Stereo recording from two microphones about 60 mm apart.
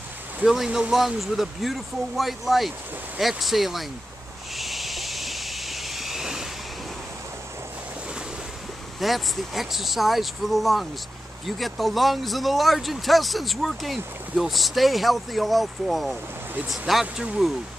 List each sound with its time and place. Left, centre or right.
0.7 s speech: centre
0.9 s speech: centre
4.6 s vehicle: centre
9.0 s speech: centre
17.0 s speech: centre